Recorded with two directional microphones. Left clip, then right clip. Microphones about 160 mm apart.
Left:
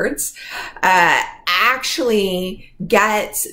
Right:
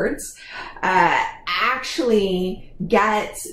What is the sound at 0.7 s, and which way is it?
Speech, 20° left (ahead or behind).